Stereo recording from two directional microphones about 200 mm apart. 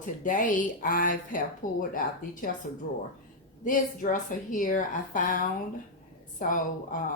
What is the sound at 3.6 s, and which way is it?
A woman's voice, 40° left (ahead or behind).